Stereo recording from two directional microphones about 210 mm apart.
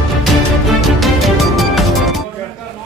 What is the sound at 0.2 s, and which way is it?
Music, centre (ahead or behind).